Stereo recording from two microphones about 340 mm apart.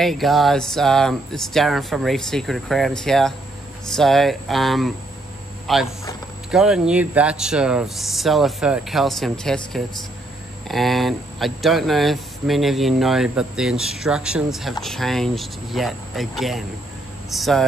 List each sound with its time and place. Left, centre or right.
0.0 s speech: centre